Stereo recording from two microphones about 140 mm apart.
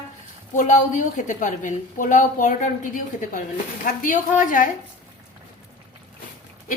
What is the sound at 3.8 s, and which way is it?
Speech, 80° left.